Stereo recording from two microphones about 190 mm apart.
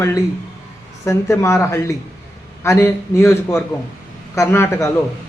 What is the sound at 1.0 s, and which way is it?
Speech, 15° left (ahead or behind).